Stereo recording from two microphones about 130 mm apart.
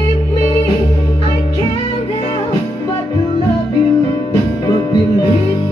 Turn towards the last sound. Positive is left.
turn(degrees=35)  # may be behind; listen again after turning